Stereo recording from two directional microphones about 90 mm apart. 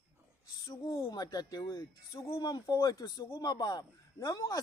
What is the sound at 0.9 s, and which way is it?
A man's voice, 40° left (ahead or behind).